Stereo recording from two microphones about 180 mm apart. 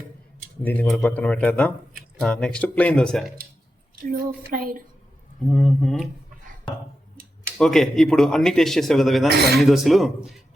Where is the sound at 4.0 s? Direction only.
50° right (ahead or behind).